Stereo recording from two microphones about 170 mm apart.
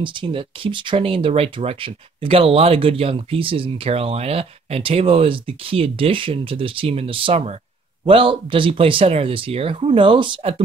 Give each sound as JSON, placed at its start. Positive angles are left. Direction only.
{"t": 0.0, "sound": "speech", "side_deg": -30}